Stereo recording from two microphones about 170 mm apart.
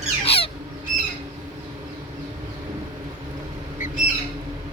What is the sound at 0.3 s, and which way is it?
Squawk, 35° left (ahead or behind).